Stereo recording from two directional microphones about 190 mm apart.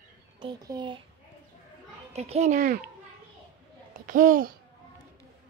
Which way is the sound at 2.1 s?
35° right (ahead or behind).